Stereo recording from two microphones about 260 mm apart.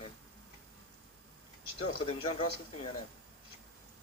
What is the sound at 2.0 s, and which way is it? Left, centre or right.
Speech, left.